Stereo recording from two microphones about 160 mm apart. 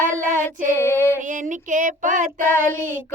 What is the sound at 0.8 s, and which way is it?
Female singing, 15° left (ahead or behind).